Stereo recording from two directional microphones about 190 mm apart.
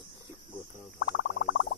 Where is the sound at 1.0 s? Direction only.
65° left (ahead or behind).